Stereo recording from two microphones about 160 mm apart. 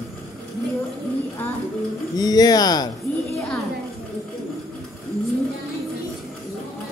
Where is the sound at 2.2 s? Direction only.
25° left (ahead or behind).